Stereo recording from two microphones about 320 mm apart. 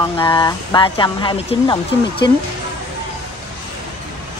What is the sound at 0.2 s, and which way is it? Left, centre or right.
Speech, centre.